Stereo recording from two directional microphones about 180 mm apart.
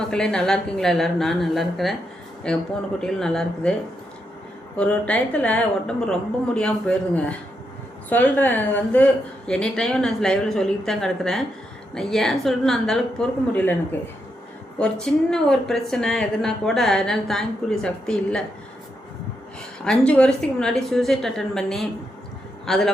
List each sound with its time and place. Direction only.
0.0 s a woman's voice: 5° left (ahead or behind)
4.8 s a woman's voice: 5° left (ahead or behind)
14.8 s a woman's voice: 5° left (ahead or behind)
19.8 s a woman's voice: 5° left (ahead or behind)